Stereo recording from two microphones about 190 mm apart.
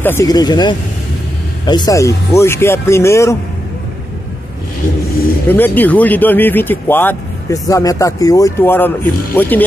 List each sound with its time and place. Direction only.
0.0 s speech: 15° left (ahead or behind)
5.5 s speech: 10° left (ahead or behind)